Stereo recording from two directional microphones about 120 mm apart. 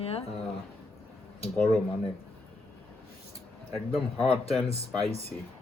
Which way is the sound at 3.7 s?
Centre (ahead or behind).